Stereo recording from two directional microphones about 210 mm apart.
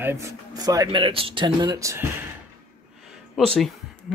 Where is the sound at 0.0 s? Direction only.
10° right (ahead or behind).